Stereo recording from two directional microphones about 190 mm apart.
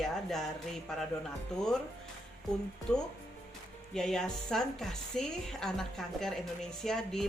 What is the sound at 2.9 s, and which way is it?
A woman's voice, 5° left (ahead or behind).